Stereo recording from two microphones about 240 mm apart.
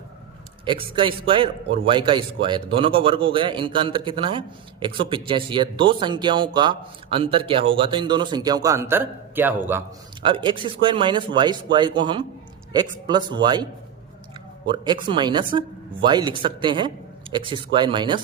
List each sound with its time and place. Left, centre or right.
0.6 s speech: right
10.2 s speech: right
15.0 s speech: centre